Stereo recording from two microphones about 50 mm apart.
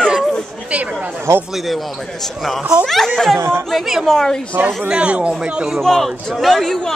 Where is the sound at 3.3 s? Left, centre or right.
Right.